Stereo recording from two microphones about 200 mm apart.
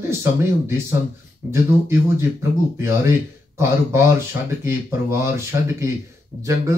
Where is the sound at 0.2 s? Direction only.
15° right (ahead or behind).